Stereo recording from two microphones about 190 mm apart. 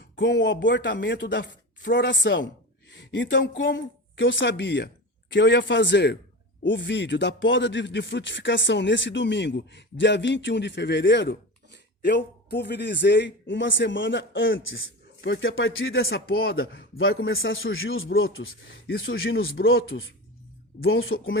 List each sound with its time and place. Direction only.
0.0 s speech: 65° left (ahead or behind)
2.9 s a sound: 70° left (ahead or behind)
4.1 s speech: 75° left (ahead or behind); by 15.8 s 90° left
16.0 s speech: 55° left (ahead or behind)
17.0 s a man's voice: 90° left; by 19.0 s 65° left (ahead or behind)
19.7 s a man's voice: 90° left